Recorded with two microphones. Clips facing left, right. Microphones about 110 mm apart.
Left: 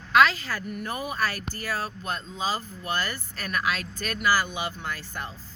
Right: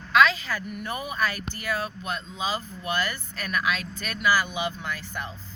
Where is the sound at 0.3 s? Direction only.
40° left (ahead or behind).